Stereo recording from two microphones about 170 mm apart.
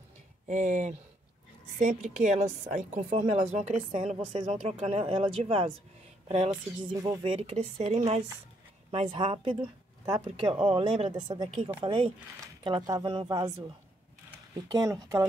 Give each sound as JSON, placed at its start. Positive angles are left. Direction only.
{"t": 0.5, "sound": "a woman's voice", "side_deg": -45}
{"t": 14.7, "sound": "speech", "side_deg": -20}